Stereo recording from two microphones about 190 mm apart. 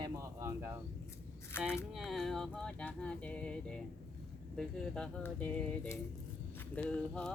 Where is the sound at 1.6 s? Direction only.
5° right (ahead or behind).